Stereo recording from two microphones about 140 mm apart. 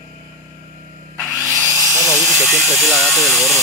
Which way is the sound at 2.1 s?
Centre (ahead or behind).